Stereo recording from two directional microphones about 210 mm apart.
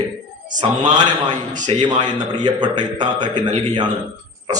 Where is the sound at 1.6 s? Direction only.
20° right (ahead or behind).